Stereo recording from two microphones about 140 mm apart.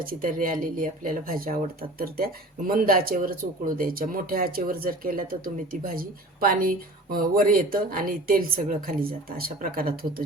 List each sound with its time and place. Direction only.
0.0 s speech: 85° right